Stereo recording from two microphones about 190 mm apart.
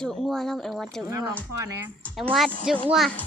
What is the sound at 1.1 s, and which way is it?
Speech, 20° right (ahead or behind).